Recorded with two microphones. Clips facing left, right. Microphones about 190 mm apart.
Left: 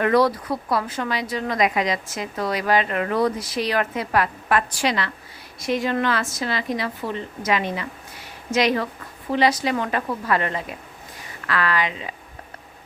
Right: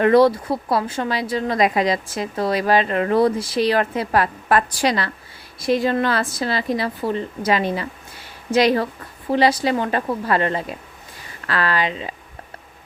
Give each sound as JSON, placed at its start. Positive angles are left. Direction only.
{"t": 0.0, "sound": "a woman's voice", "side_deg": -25}